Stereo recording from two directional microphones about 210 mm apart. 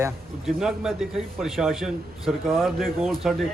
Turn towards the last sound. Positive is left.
turn(degrees=0)  # may be behind; listen again after turning